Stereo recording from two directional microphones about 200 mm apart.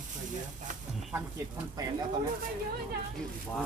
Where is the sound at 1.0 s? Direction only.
Centre (ahead or behind).